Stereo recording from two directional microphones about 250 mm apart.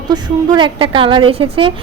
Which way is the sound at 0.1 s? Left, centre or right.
Centre.